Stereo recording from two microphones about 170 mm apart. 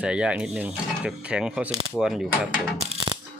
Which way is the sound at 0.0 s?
5° right (ahead or behind).